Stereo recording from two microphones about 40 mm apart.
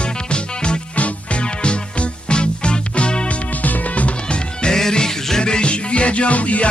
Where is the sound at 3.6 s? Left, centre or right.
Left.